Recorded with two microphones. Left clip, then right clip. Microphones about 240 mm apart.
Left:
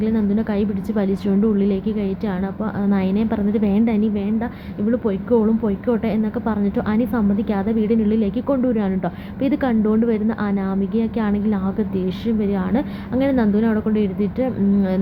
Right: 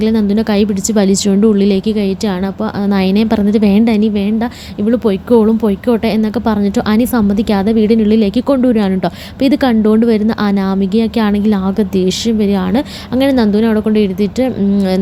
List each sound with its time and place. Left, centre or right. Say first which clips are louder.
0.0 s a woman's voice: right 8 dB; right